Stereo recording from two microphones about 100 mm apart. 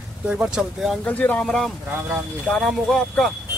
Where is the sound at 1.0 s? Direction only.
15° left (ahead or behind).